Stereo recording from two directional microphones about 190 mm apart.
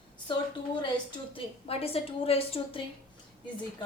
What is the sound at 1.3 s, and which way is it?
A woman's voice, 30° left (ahead or behind).